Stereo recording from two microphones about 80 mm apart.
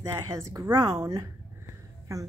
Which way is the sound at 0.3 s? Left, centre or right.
Right.